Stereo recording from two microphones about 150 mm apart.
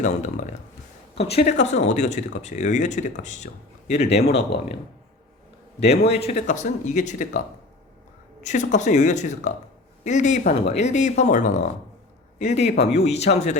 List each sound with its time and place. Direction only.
0.0 s speech: 55° left (ahead or behind)
1.1 s speech: 40° left (ahead or behind)
6.1 s speech: 45° left (ahead or behind)